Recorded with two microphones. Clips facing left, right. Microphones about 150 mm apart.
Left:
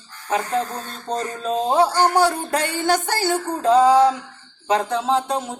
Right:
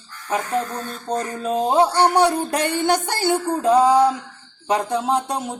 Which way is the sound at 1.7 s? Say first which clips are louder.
Right 1 dB; 20° right (ahead or behind).